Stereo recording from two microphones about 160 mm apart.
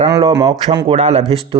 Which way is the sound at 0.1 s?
30° right (ahead or behind).